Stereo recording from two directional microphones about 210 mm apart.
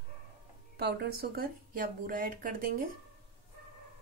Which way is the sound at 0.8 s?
50° right (ahead or behind).